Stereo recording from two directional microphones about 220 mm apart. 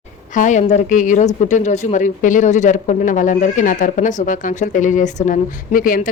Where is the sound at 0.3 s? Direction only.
35° left (ahead or behind).